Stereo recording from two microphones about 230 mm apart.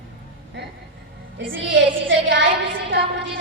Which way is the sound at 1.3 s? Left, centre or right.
Right.